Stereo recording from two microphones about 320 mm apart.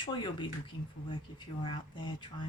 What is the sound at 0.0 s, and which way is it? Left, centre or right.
Speech, centre.